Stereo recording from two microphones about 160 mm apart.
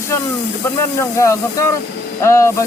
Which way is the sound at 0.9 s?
20° left (ahead or behind).